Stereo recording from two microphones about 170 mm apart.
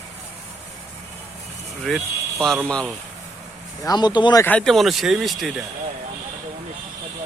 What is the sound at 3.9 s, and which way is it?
Speech, 25° left (ahead or behind).